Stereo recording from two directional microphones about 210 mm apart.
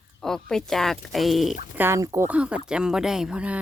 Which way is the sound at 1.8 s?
15° right (ahead or behind).